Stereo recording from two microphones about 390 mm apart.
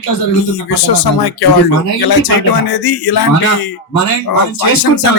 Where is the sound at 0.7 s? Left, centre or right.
Left.